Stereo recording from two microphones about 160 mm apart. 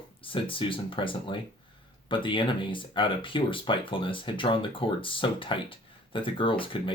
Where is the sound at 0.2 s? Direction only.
35° left (ahead or behind).